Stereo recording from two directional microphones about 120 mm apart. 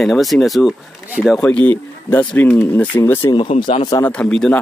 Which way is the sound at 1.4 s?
10° left (ahead or behind).